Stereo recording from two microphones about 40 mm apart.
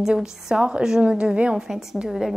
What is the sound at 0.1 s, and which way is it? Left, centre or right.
A woman's voice, right.